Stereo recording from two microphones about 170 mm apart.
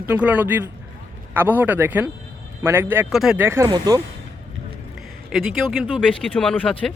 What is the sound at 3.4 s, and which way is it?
Speech, 15° right (ahead or behind).